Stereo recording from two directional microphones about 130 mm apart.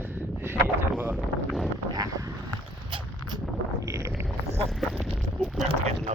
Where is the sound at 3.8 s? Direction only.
20° right (ahead or behind).